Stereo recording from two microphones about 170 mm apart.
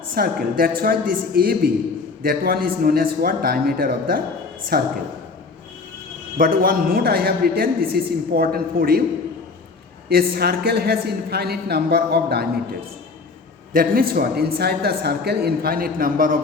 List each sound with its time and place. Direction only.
0.1 s a man's voice: 60° right (ahead or behind)
6.3 s a man's voice: 55° right (ahead or behind)
10.1 s speech: 65° right (ahead or behind)
13.7 s a man's voice: 60° right (ahead or behind)